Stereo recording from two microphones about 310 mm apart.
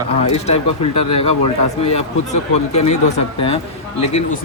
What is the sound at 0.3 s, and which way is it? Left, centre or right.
Speech, left.